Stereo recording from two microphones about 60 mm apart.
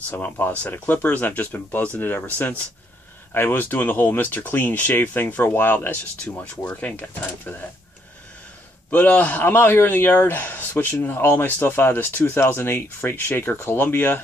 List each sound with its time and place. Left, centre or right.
0.1 s speech: left
6.2 s speech: centre
8.9 s speech: left
9.5 s speech: left